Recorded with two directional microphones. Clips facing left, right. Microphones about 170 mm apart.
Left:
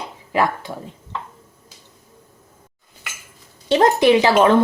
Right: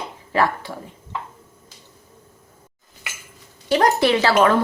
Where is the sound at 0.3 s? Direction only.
15° left (ahead or behind).